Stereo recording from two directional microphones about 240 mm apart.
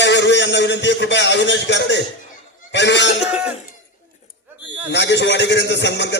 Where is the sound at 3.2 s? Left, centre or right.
Centre.